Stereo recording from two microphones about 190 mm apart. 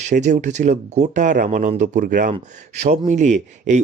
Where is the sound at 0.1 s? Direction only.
40° right (ahead or behind).